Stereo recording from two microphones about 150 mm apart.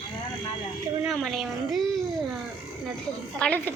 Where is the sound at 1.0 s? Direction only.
Centre (ahead or behind).